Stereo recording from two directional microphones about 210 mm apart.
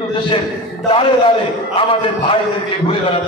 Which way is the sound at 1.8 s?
25° left (ahead or behind).